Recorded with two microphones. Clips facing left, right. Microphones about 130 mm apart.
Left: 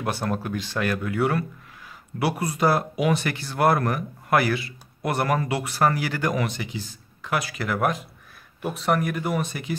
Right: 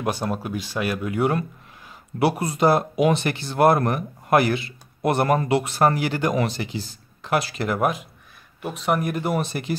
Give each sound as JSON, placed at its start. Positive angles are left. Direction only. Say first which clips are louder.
{"t": 0.0, "sound": "speech", "louder": "right 1 dB", "side_deg": -15}
{"t": 8.6, "sound": "speech", "louder": "even", "side_deg": 0}
{"t": 9.0, "sound": "speech", "louder": "right 2 dB", "side_deg": -25}